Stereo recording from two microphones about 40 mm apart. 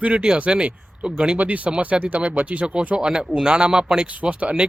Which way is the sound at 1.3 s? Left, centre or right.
Right.